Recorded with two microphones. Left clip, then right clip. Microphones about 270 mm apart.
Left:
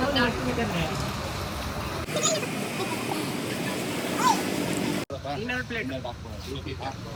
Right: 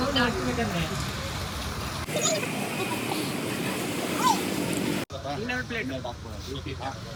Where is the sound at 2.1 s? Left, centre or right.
Centre.